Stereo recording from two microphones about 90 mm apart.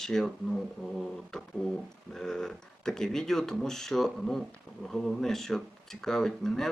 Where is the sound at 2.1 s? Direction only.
5° left (ahead or behind).